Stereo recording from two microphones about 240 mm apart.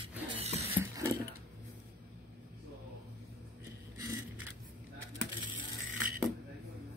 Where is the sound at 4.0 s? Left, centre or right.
Centre.